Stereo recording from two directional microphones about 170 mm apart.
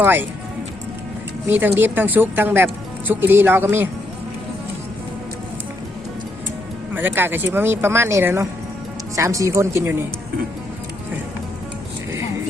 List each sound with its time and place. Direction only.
0.0 s speech: 10° right (ahead or behind)
1.5 s speech: 10° right (ahead or behind)
6.9 s speech: 10° right (ahead or behind)